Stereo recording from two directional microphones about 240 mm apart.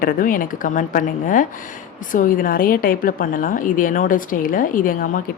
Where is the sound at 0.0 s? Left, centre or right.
Left.